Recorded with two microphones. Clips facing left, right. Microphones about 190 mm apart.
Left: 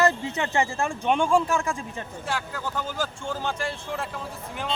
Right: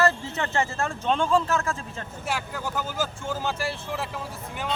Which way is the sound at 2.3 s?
10° right (ahead or behind).